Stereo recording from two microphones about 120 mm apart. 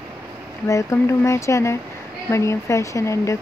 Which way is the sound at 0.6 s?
25° left (ahead or behind).